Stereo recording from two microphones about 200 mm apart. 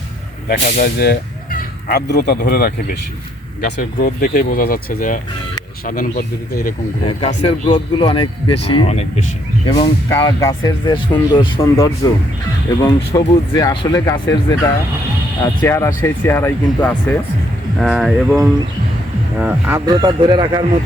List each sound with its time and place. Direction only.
0.4 s speech: 45° left (ahead or behind)
7.0 s speech: 30° left (ahead or behind)
9.6 s speech: 20° left (ahead or behind)
15.4 s speech: 15° left (ahead or behind)
19.4 s speech: 5° right (ahead or behind)
19.8 s a man's voice: 20° right (ahead or behind)